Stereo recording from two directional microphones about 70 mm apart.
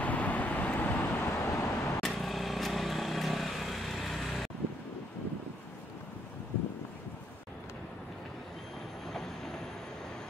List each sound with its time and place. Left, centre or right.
0.0 s vehicle: left
1.2 s vehicle: left
2.0 s vehicle: centre
9.1 s train: centre